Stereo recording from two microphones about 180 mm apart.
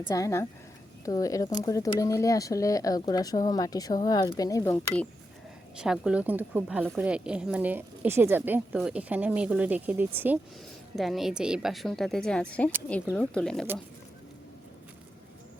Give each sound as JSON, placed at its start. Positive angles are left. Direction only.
{"t": 0.1, "sound": "speech", "side_deg": 15}
{"t": 5.7, "sound": "a woman's voice", "side_deg": -5}